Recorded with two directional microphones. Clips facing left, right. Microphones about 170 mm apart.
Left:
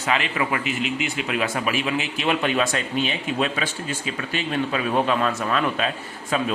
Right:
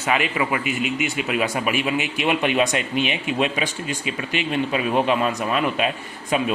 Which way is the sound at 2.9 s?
35° left (ahead or behind).